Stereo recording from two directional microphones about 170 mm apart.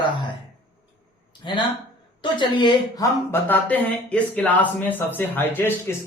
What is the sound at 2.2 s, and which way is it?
Speech, 30° left (ahead or behind).